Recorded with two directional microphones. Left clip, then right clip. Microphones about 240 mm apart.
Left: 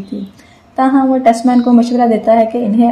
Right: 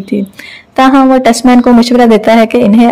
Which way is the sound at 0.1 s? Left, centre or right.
Right.